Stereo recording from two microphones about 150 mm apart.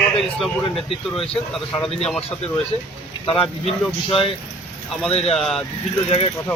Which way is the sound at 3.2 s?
40° left (ahead or behind).